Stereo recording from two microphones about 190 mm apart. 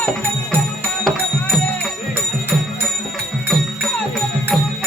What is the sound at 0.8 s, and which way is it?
Music, 5° left (ahead or behind).